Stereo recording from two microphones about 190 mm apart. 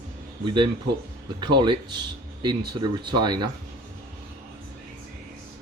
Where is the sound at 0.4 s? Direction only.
25° right (ahead or behind).